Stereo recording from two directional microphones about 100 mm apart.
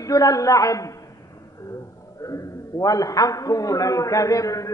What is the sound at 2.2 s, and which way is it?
A man's voice, 35° left (ahead or behind).